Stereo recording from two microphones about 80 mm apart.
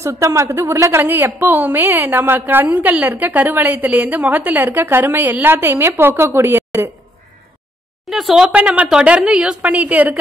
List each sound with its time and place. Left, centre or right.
0.0 s a woman's voice: right
8.0 s speech: centre
8.5 s a woman's voice: centre